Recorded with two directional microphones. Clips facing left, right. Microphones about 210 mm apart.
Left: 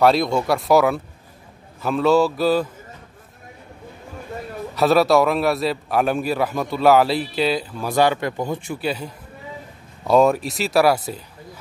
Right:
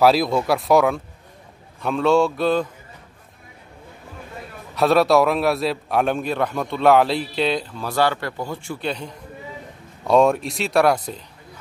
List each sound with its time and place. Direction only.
0.0 s a man's voice: centre (ahead or behind)
4.7 s a man's voice: centre (ahead or behind)
7.9 s speech: 15° left (ahead or behind)
8.8 s a man's voice: 5° left (ahead or behind)